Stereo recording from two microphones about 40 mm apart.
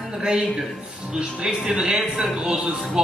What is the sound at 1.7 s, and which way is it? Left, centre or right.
Speech, centre.